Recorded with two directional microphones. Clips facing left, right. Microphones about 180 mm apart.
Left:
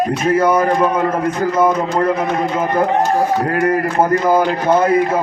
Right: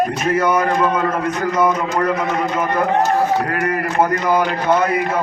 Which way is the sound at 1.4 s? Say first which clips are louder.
Left 3 dB; 30° left (ahead or behind).